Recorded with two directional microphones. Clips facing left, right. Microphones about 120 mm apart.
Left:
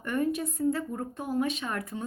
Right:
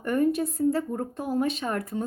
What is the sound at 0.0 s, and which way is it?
A woman's voice, 35° right (ahead or behind).